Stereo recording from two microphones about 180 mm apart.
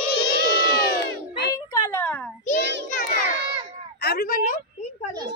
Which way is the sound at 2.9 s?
50° left (ahead or behind).